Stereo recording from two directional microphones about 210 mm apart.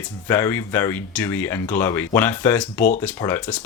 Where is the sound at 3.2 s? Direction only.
20° left (ahead or behind).